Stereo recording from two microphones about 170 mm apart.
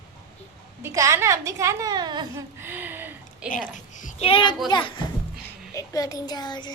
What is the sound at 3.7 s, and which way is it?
Speech, 45° left (ahead or behind).